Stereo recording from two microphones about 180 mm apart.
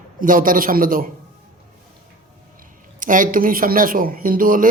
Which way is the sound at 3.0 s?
50° right (ahead or behind).